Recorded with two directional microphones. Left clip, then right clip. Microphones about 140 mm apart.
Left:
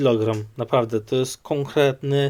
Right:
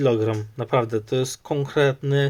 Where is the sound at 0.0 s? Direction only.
15° left (ahead or behind).